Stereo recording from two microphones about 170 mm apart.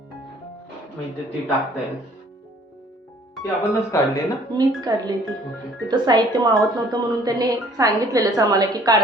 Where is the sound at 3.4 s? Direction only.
20° left (ahead or behind).